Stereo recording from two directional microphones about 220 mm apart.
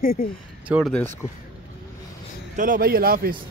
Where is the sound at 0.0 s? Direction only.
40° left (ahead or behind).